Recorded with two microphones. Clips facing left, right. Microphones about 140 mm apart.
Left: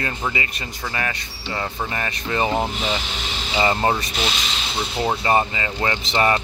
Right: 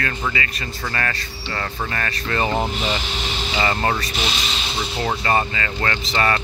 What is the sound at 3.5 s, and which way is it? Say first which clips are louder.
Speech: left 2 dB; 15° left (ahead or behind).